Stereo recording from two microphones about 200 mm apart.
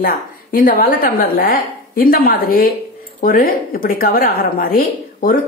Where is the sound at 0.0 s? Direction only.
45° left (ahead or behind).